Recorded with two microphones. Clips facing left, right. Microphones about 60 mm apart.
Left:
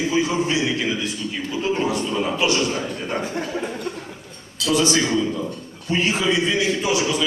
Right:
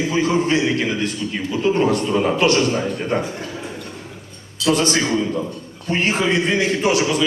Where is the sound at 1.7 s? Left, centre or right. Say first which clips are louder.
Right 6 dB; right.